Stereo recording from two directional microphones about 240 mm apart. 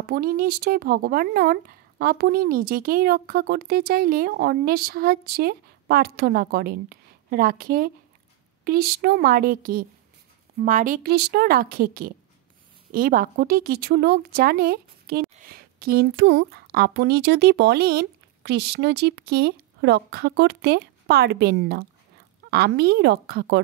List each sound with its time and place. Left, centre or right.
0.0 s a woman's voice: right